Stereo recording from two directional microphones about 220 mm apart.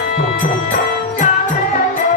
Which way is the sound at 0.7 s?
35° left (ahead or behind).